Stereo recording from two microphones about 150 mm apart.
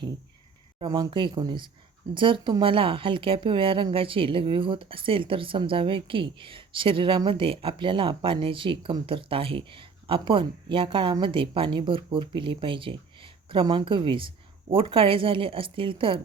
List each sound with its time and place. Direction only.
0.8 s speech: 30° right (ahead or behind)